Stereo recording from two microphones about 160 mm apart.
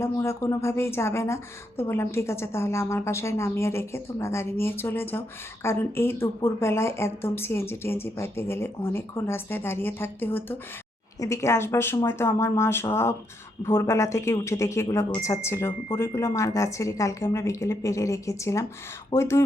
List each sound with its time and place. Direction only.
0.0 s a woman's voice: 15° left (ahead or behind)